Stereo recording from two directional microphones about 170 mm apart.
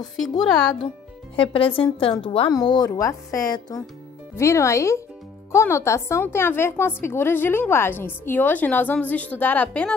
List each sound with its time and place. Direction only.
0.0 s speech: centre (ahead or behind)
1.3 s a woman's voice: 30° left (ahead or behind); by 9.9 s 10° left (ahead or behind)